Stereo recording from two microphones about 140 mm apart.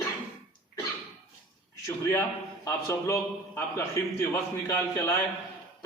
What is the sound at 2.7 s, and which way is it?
A man's voice, 20° left (ahead or behind).